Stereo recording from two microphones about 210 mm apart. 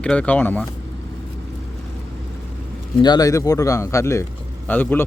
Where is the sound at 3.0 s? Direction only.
20° left (ahead or behind).